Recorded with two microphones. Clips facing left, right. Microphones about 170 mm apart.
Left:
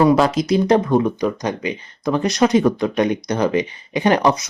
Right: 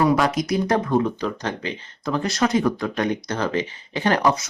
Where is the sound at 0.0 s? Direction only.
30° left (ahead or behind).